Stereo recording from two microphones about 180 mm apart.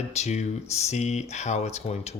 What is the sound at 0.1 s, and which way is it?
Speech, 40° left (ahead or behind).